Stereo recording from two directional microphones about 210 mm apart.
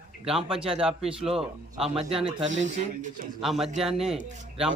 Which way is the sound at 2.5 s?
35° right (ahead or behind).